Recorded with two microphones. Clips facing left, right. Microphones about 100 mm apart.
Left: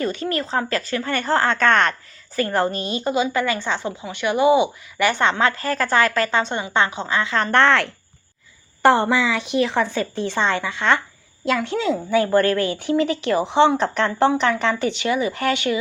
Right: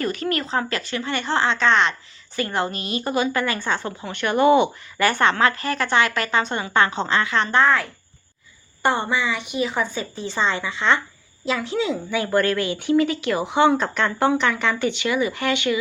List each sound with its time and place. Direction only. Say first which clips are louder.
0.0 s speech: left 1 dB; 30° left (ahead or behind)
7.5 s speech: left 3 dB; 80° left; by 15.8 s 40° left (ahead or behind)